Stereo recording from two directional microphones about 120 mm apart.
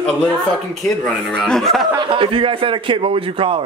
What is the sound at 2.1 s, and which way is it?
A man's voice, 45° right (ahead or behind).